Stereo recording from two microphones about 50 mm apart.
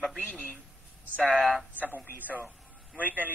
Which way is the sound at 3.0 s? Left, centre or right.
Right.